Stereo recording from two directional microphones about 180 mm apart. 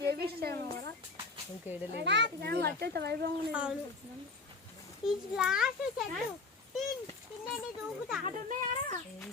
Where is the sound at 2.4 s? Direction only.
65° right (ahead or behind).